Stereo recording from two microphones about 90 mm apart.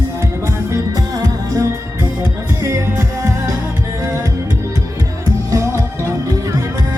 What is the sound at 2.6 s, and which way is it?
Music, 30° right (ahead or behind).